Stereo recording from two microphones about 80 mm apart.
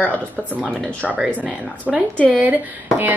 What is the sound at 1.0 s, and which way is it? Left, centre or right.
Speech, centre.